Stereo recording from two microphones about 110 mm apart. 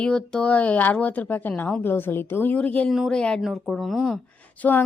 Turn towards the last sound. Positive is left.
turn(degrees=15)  # may be behind; listen again after turning